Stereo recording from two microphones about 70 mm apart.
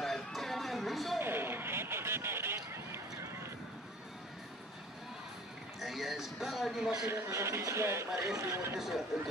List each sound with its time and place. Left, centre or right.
0.0 s music: centre
1.2 s vehicle: right
5.8 s speech: centre
7.1 s a man's voice: right
8.7 s speech: centre